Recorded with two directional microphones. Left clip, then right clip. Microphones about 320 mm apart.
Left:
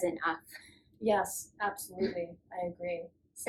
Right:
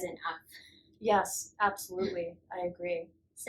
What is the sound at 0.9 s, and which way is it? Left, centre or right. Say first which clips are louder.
Speech: right 2 dB; centre.